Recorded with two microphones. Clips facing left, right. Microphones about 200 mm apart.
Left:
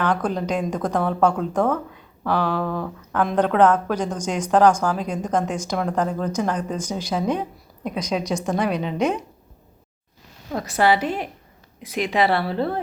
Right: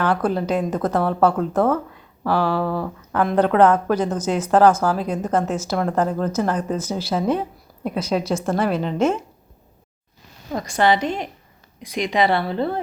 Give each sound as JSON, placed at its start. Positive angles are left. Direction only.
{"t": 0.0, "sound": "a woman's voice", "side_deg": -5}
{"t": 10.5, "sound": "speech", "side_deg": 5}